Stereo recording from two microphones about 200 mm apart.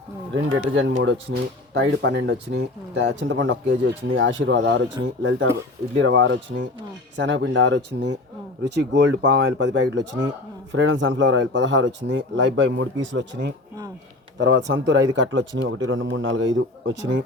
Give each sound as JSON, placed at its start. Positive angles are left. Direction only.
{"t": 0.4, "sound": "speech", "side_deg": -80}